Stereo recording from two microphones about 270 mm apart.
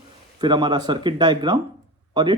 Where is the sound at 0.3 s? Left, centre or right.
Centre.